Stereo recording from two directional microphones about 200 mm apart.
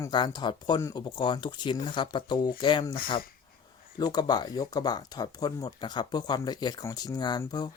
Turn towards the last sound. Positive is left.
turn(degrees=20)  # may be behind; listen again after turning